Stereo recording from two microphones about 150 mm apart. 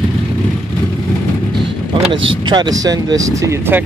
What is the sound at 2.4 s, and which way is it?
Speech, 30° right (ahead or behind).